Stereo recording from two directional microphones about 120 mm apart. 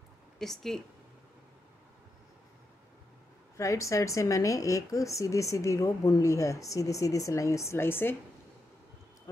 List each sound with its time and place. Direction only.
0.4 s a woman's voice: centre (ahead or behind)
3.5 s a woman's voice: 25° left (ahead or behind)